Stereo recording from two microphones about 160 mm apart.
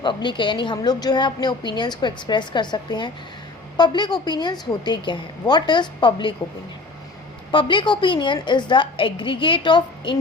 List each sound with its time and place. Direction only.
0.0 s a woman's voice: 30° left (ahead or behind)
7.5 s a woman's voice: 30° left (ahead or behind)